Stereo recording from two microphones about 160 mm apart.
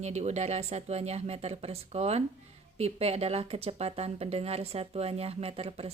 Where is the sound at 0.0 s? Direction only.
45° right (ahead or behind).